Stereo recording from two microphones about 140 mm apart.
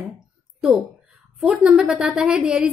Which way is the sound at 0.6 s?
5° right (ahead or behind).